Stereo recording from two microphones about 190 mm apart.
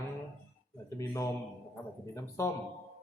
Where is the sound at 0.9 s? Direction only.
15° left (ahead or behind).